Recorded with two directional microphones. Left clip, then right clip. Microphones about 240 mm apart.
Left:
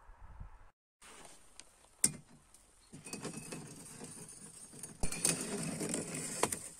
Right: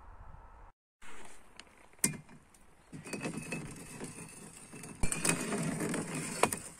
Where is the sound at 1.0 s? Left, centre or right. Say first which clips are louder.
Right 3 dB; left.